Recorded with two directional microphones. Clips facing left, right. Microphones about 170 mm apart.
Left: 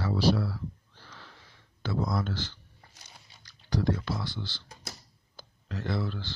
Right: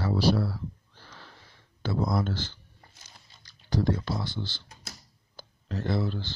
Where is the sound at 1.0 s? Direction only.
35° right (ahead or behind).